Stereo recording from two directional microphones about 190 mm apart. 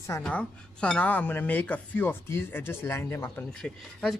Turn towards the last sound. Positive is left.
turn(degrees=5)  # may be behind; listen again after turning